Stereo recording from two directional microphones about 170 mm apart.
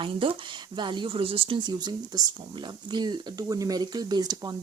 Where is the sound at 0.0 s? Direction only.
30° right (ahead or behind).